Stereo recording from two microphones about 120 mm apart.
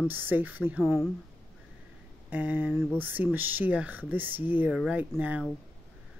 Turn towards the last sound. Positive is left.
turn(degrees=-15)  # may be behind; listen again after turning